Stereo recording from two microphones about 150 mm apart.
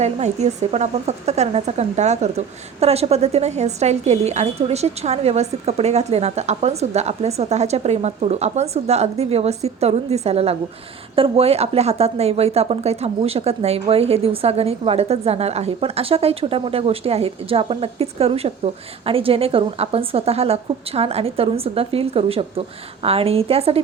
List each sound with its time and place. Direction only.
0.0 s a woman's voice: 50° right (ahead or behind)